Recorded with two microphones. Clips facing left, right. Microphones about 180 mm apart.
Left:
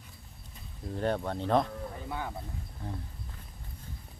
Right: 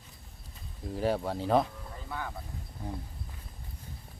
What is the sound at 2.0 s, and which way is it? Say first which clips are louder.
Speech: even; 20° left (ahead or behind).